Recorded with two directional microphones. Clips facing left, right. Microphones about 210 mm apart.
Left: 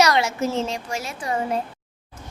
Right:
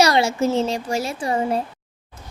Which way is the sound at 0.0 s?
30° right (ahead or behind).